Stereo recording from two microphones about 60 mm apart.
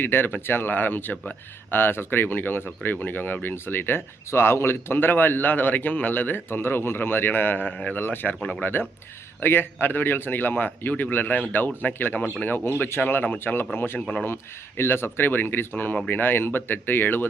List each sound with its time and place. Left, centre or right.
0.0 s speech: left
1.7 s speech: left
8.4 s speech: centre
9.4 s speech: left